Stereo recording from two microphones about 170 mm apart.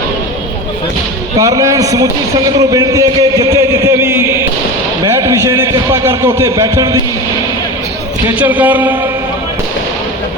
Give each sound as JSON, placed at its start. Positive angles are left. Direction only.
{"t": 1.4, "sound": "a man's voice", "side_deg": -20}
{"t": 5.0, "sound": "a sound", "side_deg": -15}
{"t": 8.4, "sound": "a man's voice", "side_deg": -10}